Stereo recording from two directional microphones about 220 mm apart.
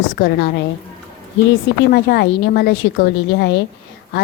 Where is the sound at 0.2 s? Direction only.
45° left (ahead or behind).